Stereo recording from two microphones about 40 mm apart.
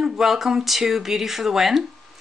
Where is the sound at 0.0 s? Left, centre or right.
Centre.